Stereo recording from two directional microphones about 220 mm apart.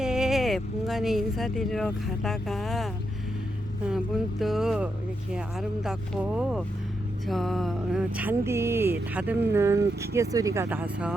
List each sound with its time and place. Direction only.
0.0 s speech: 5° right (ahead or behind)